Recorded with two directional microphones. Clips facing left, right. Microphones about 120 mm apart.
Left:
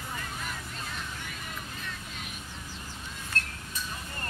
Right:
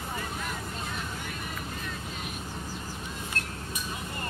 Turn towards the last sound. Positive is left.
turn(degrees=-10)  # may be behind; listen again after turning